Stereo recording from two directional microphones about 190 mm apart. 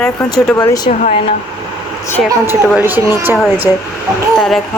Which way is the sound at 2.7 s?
10° right (ahead or behind).